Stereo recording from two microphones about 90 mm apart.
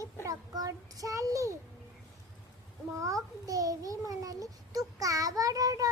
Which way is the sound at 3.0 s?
40° right (ahead or behind).